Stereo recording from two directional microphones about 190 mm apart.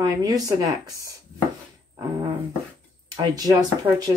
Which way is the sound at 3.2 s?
20° right (ahead or behind).